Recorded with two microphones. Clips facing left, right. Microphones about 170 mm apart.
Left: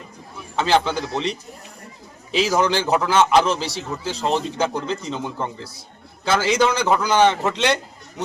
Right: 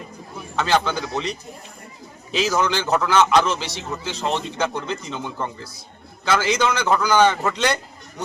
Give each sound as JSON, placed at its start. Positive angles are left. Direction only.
{"t": 0.5, "sound": "a man's voice", "side_deg": 30}
{"t": 2.4, "sound": "a man's voice", "side_deg": 30}